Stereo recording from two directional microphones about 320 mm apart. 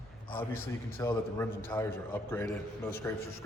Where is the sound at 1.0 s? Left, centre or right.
Centre.